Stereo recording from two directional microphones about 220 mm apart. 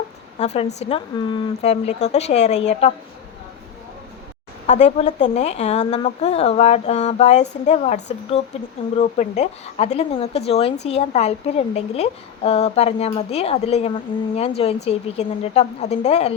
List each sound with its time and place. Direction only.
0.3 s a woman's voice: 30° left (ahead or behind)
4.6 s a woman's voice: 30° left (ahead or behind)